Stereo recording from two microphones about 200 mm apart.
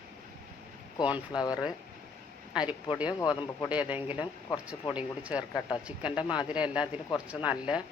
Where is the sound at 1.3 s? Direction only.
20° left (ahead or behind).